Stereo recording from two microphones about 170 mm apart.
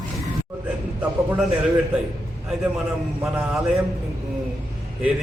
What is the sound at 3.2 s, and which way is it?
Speech, 10° right (ahead or behind).